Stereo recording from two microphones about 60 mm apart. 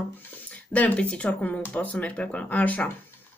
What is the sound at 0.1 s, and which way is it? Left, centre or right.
Speech, left.